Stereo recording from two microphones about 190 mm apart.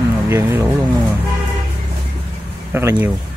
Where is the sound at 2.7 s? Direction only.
10° right (ahead or behind).